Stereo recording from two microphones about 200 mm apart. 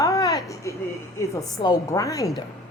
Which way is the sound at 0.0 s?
15° left (ahead or behind).